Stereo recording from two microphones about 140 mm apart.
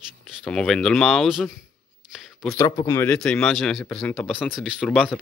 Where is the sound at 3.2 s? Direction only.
5° left (ahead or behind).